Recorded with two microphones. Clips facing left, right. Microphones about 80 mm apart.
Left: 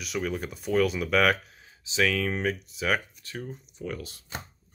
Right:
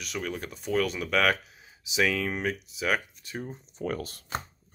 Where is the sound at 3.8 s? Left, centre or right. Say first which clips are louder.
Right 4 dB; right.